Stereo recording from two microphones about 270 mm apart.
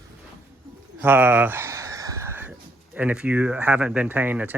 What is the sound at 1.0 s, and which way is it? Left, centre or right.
Speech, centre.